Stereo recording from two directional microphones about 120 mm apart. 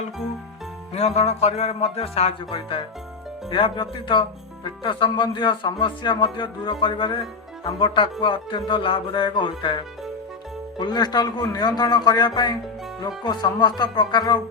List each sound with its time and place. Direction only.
0.9 s music: 60° left (ahead or behind)
3.5 s speech: 45° left (ahead or behind)